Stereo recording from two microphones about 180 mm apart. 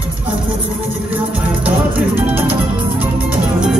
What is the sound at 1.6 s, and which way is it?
Music, 10° right (ahead or behind).